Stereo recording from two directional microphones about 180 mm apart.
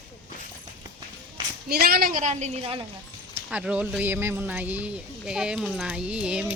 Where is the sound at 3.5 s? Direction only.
5° right (ahead or behind).